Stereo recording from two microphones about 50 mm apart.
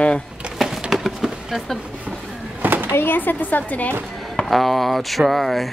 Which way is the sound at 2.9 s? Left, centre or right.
Left.